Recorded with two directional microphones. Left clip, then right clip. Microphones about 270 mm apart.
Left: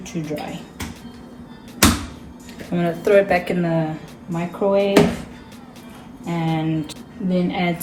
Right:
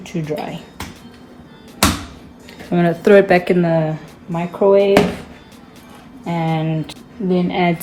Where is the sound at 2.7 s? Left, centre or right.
Right.